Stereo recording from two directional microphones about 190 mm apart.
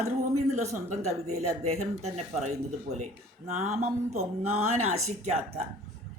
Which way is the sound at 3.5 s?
35° right (ahead or behind).